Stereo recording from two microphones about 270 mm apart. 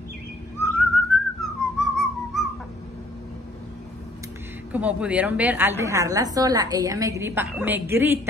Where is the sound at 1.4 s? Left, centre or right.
Centre.